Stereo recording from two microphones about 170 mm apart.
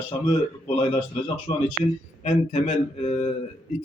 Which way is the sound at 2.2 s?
40° left (ahead or behind).